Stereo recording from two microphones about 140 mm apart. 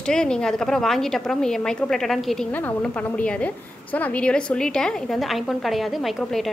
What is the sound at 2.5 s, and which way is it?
A woman's voice, 10° left (ahead or behind).